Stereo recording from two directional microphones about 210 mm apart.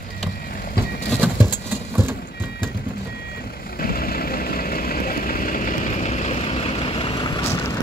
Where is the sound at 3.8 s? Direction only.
45° left (ahead or behind); by 7.5 s 20° left (ahead or behind).